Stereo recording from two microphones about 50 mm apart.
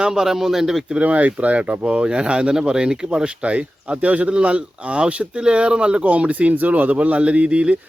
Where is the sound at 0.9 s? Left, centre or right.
Right.